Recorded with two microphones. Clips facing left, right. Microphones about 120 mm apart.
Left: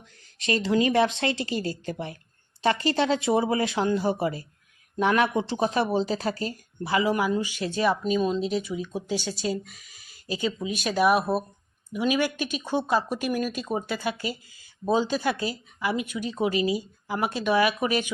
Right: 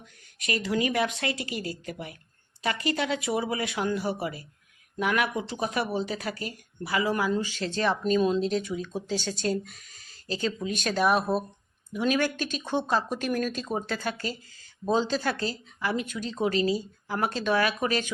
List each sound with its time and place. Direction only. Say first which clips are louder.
0.0 s speech: left 5 dB; 30° left (ahead or behind)
7.1 s speech: left 2 dB; 15° left (ahead or behind)